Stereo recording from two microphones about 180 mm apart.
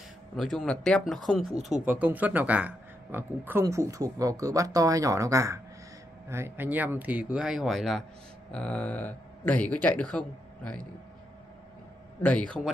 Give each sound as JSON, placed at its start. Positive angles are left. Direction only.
{"t": 0.4, "sound": "speech", "side_deg": 0}
{"t": 1.9, "sound": "speech", "side_deg": -10}
{"t": 12.2, "sound": "speech", "side_deg": 5}